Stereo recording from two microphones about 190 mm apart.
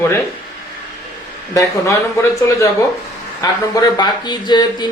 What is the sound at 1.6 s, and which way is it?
Speech, 15° left (ahead or behind).